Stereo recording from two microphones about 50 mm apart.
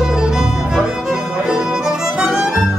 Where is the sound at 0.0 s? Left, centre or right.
Centre.